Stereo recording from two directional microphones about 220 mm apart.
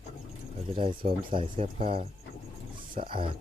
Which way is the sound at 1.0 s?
35° right (ahead or behind).